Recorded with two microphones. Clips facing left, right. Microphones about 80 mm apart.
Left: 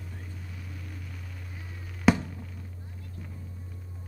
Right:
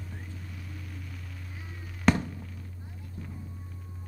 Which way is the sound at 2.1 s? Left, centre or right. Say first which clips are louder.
Left 2 dB; centre.